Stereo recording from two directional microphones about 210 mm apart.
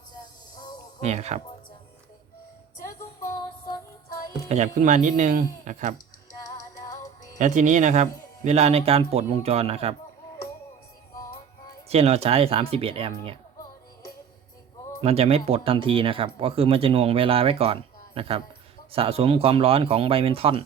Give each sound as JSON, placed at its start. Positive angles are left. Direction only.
{"t": 0.5, "sound": "a sound", "side_deg": 20}
{"t": 1.0, "sound": "speech", "side_deg": -30}
{"t": 3.2, "sound": "music", "side_deg": 15}
{"t": 4.4, "sound": "speech", "side_deg": -35}
{"t": 7.3, "sound": "speech", "side_deg": -35}
{"t": 11.9, "sound": "speech", "side_deg": -30}
{"t": 15.0, "sound": "speech", "side_deg": -30}